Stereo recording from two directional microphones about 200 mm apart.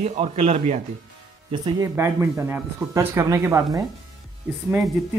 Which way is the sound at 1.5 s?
20° right (ahead or behind).